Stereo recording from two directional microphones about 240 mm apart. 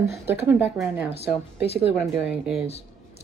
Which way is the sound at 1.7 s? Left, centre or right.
Left.